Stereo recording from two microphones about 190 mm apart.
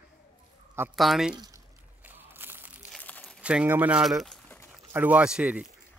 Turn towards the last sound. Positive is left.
turn(degrees=-5)  # may be behind; listen again after turning